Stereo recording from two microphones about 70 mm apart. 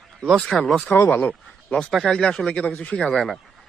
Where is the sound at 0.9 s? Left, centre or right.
Left.